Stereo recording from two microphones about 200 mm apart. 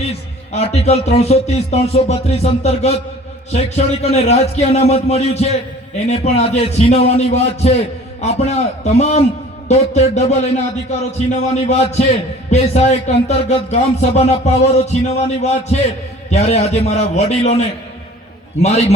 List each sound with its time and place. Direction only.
0.5 s a man's voice: 30° left (ahead or behind)
18.6 s a man's voice: 35° left (ahead or behind)